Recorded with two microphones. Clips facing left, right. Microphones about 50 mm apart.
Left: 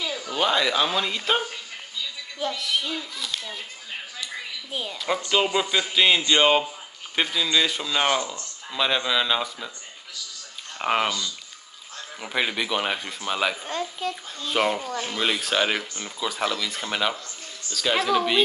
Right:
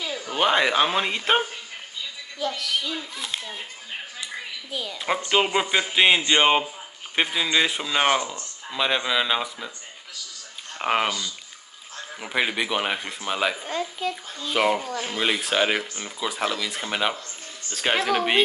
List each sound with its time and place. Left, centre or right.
0.0 s speech: centre
2.4 s speech: left
3.0 s speech: right
4.6 s a woman's voice: left
4.9 s speech: right
10.8 s speech: centre
13.7 s speech: right
14.6 s speech: centre
17.6 s speech: right